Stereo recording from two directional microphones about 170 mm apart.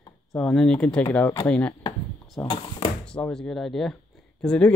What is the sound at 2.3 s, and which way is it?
Speech, 25° left (ahead or behind).